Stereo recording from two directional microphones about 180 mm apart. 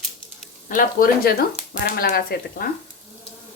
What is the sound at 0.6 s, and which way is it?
Speech, 50° left (ahead or behind).